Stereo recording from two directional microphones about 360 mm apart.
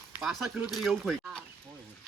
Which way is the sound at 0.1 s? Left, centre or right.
Centre.